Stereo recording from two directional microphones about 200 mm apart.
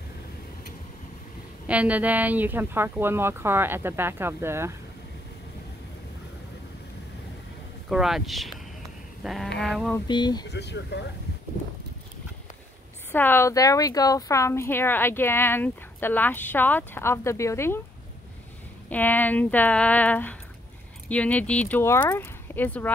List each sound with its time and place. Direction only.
1.7 s speech: 5° right (ahead or behind)
7.9 s speech: centre (ahead or behind)
9.2 s a sound: centre (ahead or behind)
9.6 s speech: centre (ahead or behind)
9.9 s speech: 20° left (ahead or behind)
10.5 s speech: 55° left (ahead or behind)
13.1 s speech: 10° left (ahead or behind)
18.9 s speech: 10° left (ahead or behind)